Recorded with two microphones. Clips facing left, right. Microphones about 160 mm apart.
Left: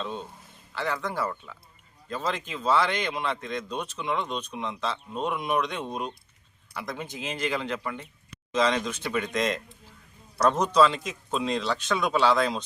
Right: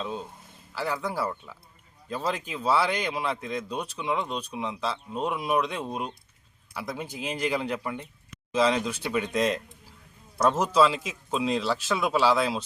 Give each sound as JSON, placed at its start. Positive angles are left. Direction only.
{"t": 0.0, "sound": "speech", "side_deg": -5}